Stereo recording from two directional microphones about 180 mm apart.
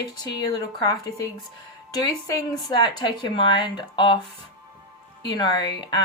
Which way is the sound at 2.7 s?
25° left (ahead or behind).